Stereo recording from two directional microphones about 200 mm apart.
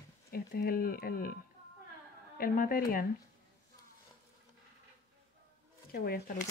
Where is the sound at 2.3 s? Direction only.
45° left (ahead or behind).